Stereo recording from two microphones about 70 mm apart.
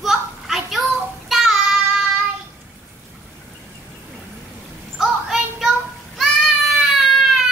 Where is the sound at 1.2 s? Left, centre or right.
Centre.